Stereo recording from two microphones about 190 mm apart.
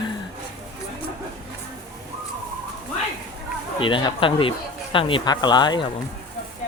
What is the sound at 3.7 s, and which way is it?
Speech, 25° left (ahead or behind).